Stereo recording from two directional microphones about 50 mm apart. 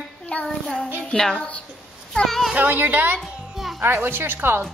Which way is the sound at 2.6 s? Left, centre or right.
Right.